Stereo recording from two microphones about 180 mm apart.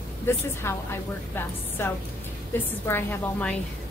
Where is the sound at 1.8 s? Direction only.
15° left (ahead or behind).